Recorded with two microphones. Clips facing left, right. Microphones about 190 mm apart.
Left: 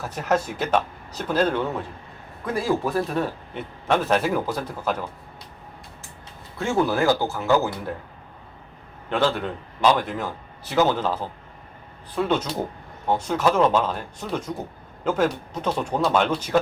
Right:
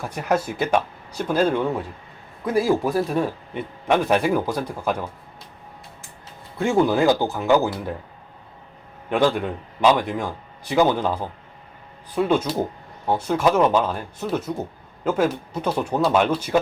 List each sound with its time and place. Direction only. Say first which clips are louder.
0.0 s a man's voice: right 1 dB; 10° right (ahead or behind)
6.6 s a man's voice: right 3 dB; 15° right (ahead or behind)
9.0 s a man's voice: right 3 dB; 15° right (ahead or behind)